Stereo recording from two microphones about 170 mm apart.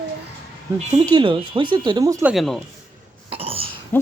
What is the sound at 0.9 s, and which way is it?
Speech, 25° right (ahead or behind).